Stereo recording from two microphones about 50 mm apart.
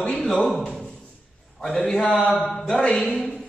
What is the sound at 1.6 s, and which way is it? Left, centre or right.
A man's voice, centre.